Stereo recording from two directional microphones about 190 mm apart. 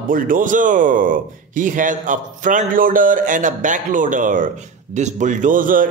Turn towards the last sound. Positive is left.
turn(degrees=-45)  # may be behind; listen again after turning